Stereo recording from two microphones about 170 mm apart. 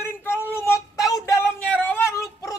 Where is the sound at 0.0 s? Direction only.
15° left (ahead or behind).